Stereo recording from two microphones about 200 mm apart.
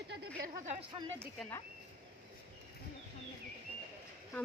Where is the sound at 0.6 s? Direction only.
35° right (ahead or behind).